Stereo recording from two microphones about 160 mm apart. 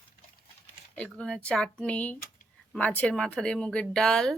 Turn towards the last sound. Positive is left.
turn(degrees=5)  # may be behind; listen again after turning